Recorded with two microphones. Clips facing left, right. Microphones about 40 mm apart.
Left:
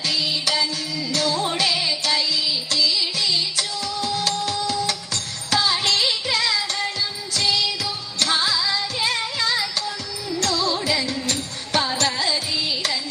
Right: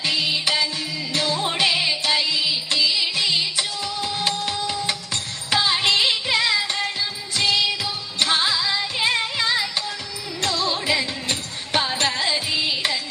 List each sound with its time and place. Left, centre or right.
0.0 s music: right